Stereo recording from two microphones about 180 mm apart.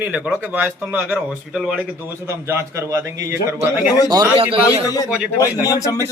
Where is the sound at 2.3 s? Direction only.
15° right (ahead or behind).